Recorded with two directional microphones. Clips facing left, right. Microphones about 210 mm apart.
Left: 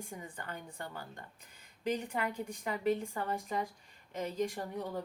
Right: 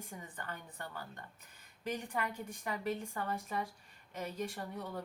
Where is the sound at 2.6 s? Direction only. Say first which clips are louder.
Left 6 dB; 15° left (ahead or behind).